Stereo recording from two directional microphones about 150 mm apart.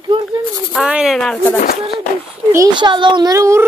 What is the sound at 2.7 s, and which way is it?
Speech, 30° right (ahead or behind).